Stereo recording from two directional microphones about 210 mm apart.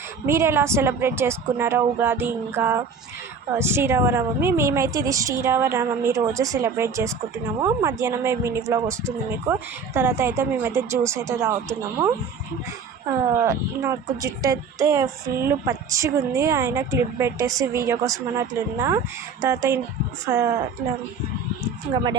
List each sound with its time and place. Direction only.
0.3 s speech: 15° right (ahead or behind)
13.4 s speech: 15° right (ahead or behind)
21.9 s speech: 20° right (ahead or behind)